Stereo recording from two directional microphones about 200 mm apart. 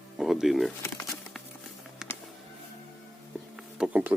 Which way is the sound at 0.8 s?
15° left (ahead or behind).